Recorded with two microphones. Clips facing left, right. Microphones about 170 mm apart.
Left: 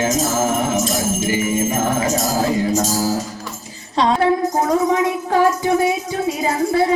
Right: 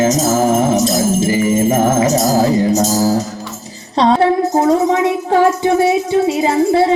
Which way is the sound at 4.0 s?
35° right (ahead or behind).